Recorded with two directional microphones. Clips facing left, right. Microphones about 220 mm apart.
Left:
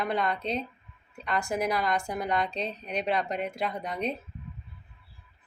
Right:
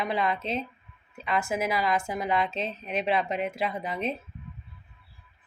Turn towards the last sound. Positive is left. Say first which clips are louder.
# right 1 dB
turn(degrees=0)  # may be behind; listen again after turning